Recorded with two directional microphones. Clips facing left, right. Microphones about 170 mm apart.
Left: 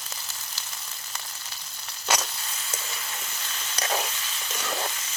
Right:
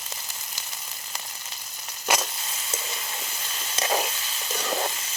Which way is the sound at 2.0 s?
15° right (ahead or behind).